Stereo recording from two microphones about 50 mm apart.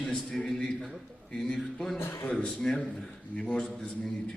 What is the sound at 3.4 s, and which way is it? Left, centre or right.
Speech, centre.